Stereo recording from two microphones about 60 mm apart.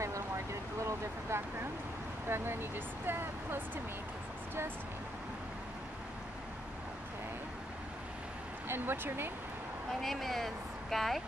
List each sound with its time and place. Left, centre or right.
0.0 s a sound: right
2.2 s speech: right
8.6 s speech: right
10.0 s speech: centre